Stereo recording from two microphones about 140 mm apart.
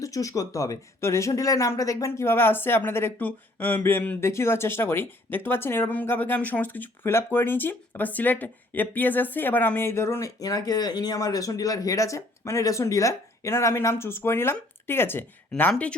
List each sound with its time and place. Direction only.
0.0 s speech: 25° left (ahead or behind); by 16.0 s 5° left (ahead or behind)